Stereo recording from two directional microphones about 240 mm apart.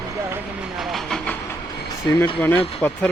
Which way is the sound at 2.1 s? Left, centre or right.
Centre.